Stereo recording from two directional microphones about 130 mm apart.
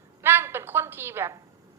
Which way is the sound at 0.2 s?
20° right (ahead or behind).